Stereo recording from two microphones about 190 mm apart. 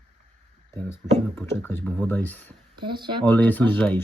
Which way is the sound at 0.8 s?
10° left (ahead or behind).